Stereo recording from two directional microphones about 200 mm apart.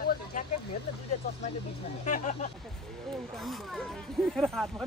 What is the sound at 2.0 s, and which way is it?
Speech, 35° left (ahead or behind).